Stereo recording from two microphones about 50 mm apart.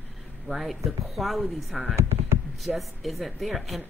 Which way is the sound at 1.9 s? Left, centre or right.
Right.